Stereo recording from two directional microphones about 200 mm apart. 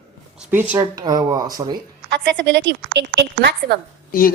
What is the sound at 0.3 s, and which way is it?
Speech, 10° right (ahead or behind).